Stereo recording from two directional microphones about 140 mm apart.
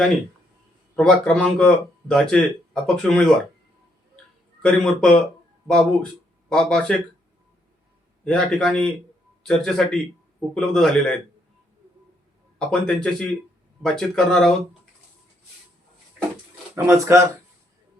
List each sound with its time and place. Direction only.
0.9 s speech: 5° left (ahead or behind)
4.6 s speech: 5° left (ahead or behind)
8.2 s speech: 5° left (ahead or behind)
12.5 s speech: 5° left (ahead or behind)
16.7 s speech: 20° right (ahead or behind)